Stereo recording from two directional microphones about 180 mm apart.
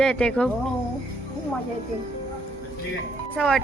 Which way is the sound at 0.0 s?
5° left (ahead or behind).